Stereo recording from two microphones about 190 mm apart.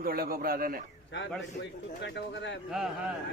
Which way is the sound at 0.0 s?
50° right (ahead or behind).